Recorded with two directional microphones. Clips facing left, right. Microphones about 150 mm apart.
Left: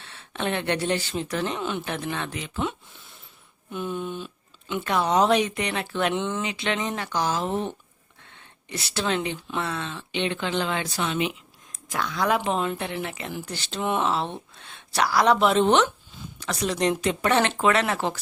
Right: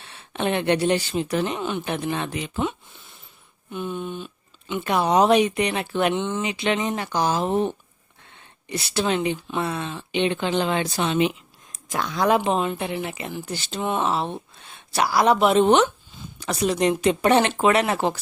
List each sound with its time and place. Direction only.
0.0 s speech: 15° right (ahead or behind)
3.7 s speech: centre (ahead or behind)
4.8 s speech: 15° right (ahead or behind)
6.1 s speech: centre (ahead or behind)
6.4 s speech: 15° right (ahead or behind)
8.7 s speech: 15° right (ahead or behind)